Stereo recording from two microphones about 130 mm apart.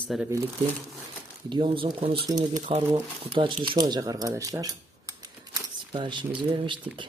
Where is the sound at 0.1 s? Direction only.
Centre (ahead or behind).